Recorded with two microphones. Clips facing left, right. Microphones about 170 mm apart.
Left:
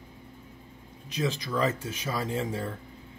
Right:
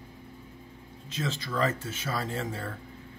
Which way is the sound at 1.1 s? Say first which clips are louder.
Left 3 dB; 15° left (ahead or behind).